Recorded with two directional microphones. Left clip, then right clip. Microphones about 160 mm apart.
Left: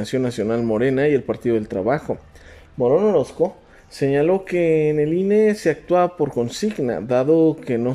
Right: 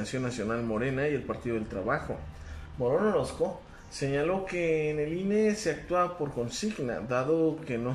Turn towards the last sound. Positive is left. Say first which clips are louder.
# left 11 dB
turn(degrees=45)  # may be behind; listen again after turning